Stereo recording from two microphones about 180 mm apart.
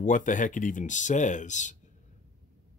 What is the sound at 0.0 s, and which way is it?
Speech, 45° left (ahead or behind).